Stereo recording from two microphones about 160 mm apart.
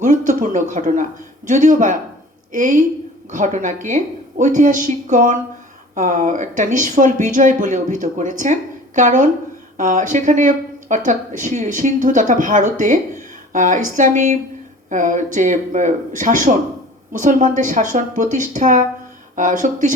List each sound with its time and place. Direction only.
0.0 s a woman's voice: 50° right (ahead or behind)